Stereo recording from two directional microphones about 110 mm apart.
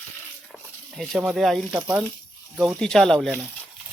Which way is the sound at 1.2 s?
5° right (ahead or behind).